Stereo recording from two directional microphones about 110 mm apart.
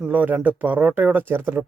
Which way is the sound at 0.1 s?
15° right (ahead or behind).